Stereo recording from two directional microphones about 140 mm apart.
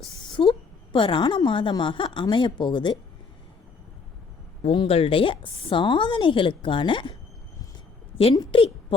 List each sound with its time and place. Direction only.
0.2 s a sound: 35° left (ahead or behind)
0.9 s speech: 35° left (ahead or behind)
4.6 s speech: 40° left (ahead or behind)
8.4 s a woman's voice: 40° left (ahead or behind)